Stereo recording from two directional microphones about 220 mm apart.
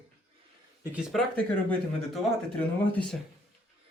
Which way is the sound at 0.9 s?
Centre (ahead or behind).